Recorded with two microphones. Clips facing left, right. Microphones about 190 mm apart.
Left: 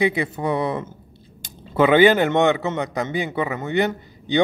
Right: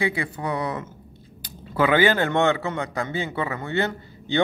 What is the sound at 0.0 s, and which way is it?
A man's voice, 20° left (ahead or behind).